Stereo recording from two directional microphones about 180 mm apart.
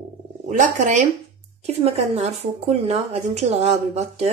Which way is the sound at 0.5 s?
45° right (ahead or behind).